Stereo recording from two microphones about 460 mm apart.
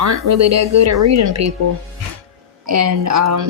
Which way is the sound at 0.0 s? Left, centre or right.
Right.